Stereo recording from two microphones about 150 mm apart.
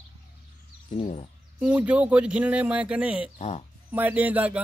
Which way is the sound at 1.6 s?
10° right (ahead or behind).